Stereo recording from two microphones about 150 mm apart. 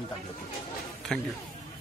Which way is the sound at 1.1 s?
5° left (ahead or behind).